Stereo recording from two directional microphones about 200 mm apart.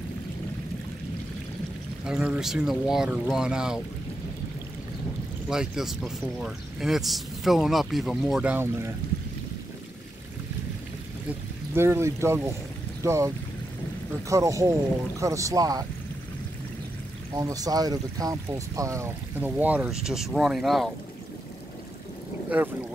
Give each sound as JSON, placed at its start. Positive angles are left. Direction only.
{"t": 2.0, "sound": "speech", "side_deg": -5}
{"t": 5.5, "sound": "speech", "side_deg": 0}
{"t": 11.2, "sound": "speech", "side_deg": -10}
{"t": 14.3, "sound": "speech", "side_deg": -15}
{"t": 17.3, "sound": "speech", "side_deg": -15}